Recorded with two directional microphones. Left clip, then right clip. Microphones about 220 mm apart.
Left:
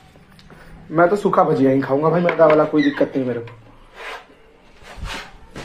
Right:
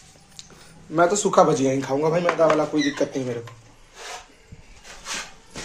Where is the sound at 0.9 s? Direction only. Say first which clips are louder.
Left 2 dB; 10° right (ahead or behind).